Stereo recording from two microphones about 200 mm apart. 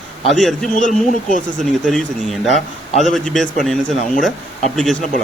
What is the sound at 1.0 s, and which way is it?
Speech, 40° left (ahead or behind).